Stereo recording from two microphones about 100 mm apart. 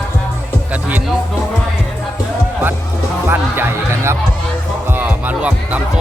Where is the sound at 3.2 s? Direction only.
25° right (ahead or behind).